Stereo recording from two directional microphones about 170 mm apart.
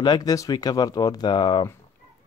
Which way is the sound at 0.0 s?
25° left (ahead or behind).